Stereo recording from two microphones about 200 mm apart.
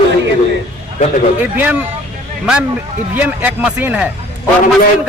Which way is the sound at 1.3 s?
10° right (ahead or behind).